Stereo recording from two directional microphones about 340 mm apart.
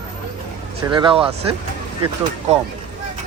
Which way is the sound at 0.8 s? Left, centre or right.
Centre.